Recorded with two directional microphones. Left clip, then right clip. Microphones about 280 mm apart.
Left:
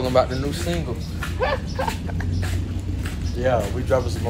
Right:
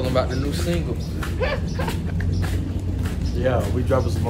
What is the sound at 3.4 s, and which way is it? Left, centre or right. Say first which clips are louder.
Speech: left 1 dB; centre.